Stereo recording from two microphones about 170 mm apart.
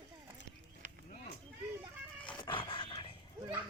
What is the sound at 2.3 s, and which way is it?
Dog, 30° left (ahead or behind).